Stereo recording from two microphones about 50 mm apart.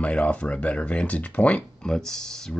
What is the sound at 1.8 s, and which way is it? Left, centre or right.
Speech, centre.